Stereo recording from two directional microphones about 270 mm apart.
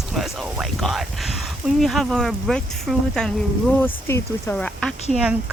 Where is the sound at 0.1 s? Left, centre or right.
Centre.